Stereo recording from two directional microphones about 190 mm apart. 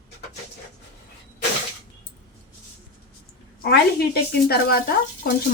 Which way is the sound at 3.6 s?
55° left (ahead or behind).